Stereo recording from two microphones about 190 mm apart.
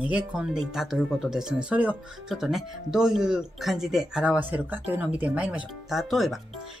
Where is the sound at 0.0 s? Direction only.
5° right (ahead or behind).